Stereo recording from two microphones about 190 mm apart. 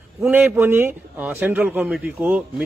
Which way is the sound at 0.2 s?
10° right (ahead or behind).